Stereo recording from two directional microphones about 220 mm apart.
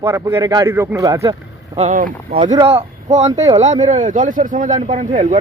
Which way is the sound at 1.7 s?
35° right (ahead or behind).